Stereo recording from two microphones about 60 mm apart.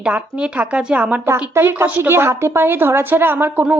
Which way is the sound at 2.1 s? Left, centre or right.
Right.